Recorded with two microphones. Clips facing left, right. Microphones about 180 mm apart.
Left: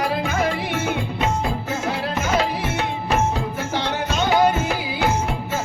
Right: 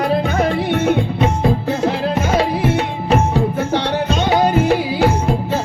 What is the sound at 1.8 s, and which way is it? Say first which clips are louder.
Music: right 6 dB; 30° right (ahead or behind).